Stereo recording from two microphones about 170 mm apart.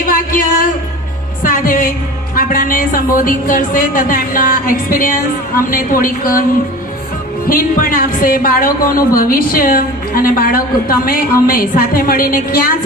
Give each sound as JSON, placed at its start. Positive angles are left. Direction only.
{"t": 0.1, "sound": "a sound", "side_deg": 55}
{"t": 2.3, "sound": "speech", "side_deg": 55}
{"t": 7.4, "sound": "speech", "side_deg": 55}